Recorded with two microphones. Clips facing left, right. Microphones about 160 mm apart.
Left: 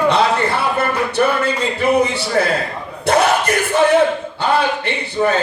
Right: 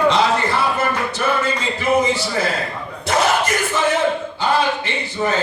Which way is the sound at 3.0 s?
60° left (ahead or behind).